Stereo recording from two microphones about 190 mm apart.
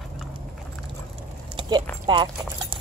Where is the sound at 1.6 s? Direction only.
25° right (ahead or behind).